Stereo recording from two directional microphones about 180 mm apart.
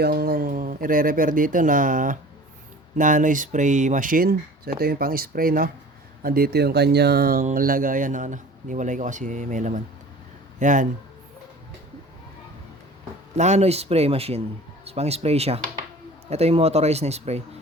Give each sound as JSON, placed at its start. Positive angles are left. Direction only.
{"t": 0.0, "sound": "speech", "side_deg": -60}
{"t": 13.3, "sound": "speech", "side_deg": -40}